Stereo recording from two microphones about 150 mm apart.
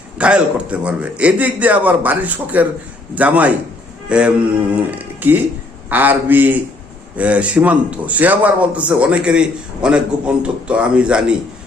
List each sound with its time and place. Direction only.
0.2 s a man's voice: 10° right (ahead or behind)